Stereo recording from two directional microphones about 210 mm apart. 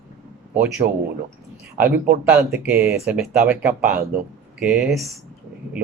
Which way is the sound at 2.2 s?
5° right (ahead or behind).